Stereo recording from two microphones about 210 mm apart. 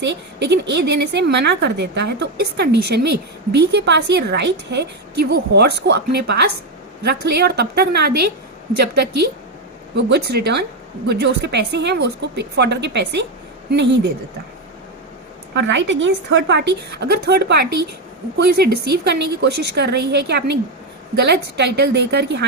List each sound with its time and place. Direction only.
0.0 s a woman's voice: 55° right (ahead or behind)
9.9 s a woman's voice: 50° right (ahead or behind)
15.5 s a woman's voice: 60° right (ahead or behind)